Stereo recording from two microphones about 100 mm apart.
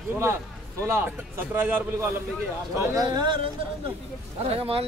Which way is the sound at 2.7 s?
40° right (ahead or behind).